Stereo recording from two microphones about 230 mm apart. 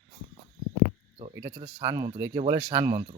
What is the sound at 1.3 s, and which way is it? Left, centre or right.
Speech, right.